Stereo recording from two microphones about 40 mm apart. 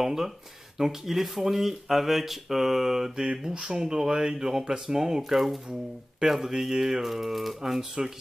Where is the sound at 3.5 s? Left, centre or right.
Centre.